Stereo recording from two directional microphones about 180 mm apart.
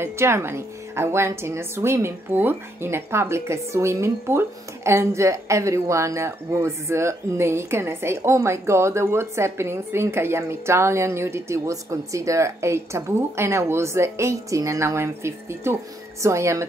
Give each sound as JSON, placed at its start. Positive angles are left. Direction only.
{"t": 0.0, "sound": "a woman's voice", "side_deg": -15}